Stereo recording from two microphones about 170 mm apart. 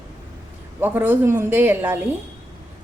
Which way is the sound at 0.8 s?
10° right (ahead or behind).